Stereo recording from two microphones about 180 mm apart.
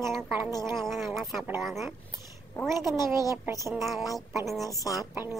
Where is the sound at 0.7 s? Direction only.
Centre (ahead or behind).